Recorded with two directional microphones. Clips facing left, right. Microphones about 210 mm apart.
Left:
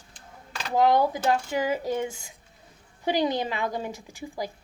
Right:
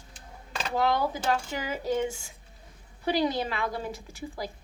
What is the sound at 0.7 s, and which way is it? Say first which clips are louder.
A woman's voice: left 5 dB; 15° left (ahead or behind).